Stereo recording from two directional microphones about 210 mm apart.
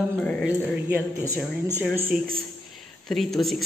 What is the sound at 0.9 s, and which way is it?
Speech, 10° right (ahead or behind).